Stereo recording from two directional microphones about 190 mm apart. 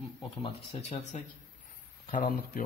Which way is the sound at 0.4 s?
30° left (ahead or behind).